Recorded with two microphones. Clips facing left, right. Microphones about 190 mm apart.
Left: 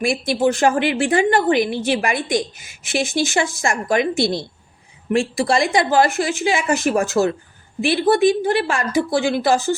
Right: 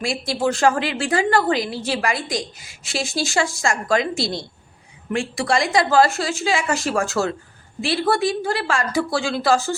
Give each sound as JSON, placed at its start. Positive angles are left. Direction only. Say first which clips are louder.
{"t": 0.0, "sound": "a woman's voice", "louder": "left 4 dB", "side_deg": 20}